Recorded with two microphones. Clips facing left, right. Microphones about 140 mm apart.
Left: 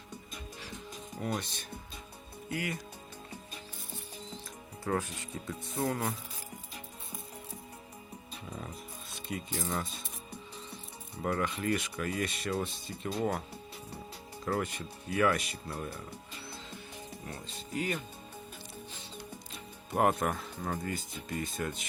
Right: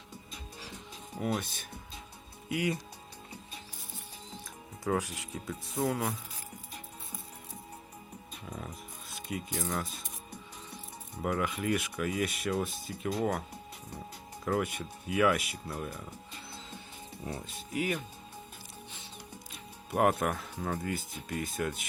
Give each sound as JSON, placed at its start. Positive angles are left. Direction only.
{"t": 1.2, "sound": "speech", "side_deg": -5}
{"t": 2.5, "sound": "speech", "side_deg": -15}
{"t": 4.8, "sound": "speech", "side_deg": -10}
{"t": 8.4, "sound": "music", "side_deg": 5}
{"t": 9.1, "sound": "speech", "side_deg": 0}
{"t": 11.2, "sound": "speech", "side_deg": -5}
{"t": 14.4, "sound": "speech", "side_deg": -5}
{"t": 17.2, "sound": "speech", "side_deg": -15}
{"t": 19.9, "sound": "speech", "side_deg": 0}